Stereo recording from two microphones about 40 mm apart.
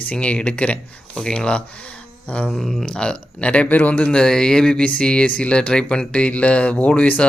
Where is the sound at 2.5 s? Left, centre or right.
Centre.